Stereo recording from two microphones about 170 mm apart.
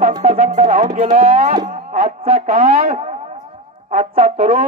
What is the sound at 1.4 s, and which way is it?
Cattle, 30° right (ahead or behind).